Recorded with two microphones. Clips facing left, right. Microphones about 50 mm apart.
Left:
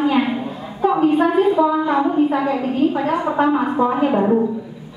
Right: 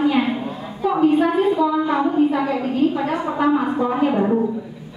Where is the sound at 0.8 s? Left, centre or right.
Left.